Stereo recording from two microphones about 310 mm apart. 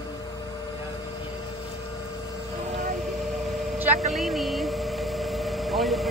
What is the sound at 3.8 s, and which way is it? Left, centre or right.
Vehicle, centre.